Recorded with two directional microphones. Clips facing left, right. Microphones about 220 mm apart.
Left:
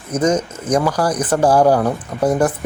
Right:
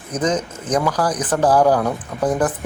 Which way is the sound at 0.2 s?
10° left (ahead or behind).